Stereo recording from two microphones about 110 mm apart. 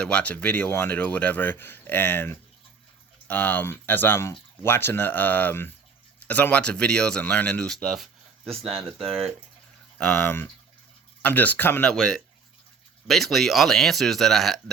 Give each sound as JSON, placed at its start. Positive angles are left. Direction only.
{"t": 0.0, "sound": "speech", "side_deg": 10}
{"t": 10.0, "sound": "speech", "side_deg": 15}